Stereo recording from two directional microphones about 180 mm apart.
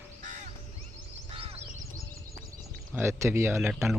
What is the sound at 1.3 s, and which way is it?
Crow, 30° right (ahead or behind).